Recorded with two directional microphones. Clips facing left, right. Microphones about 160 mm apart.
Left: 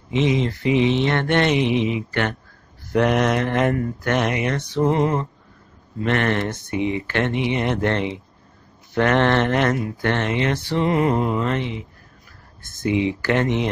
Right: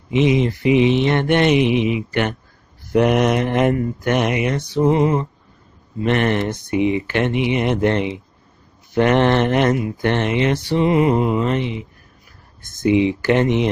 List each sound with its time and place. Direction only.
0.1 s speech: 15° right (ahead or behind)